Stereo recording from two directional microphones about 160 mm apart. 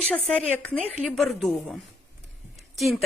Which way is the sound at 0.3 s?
10° left (ahead or behind).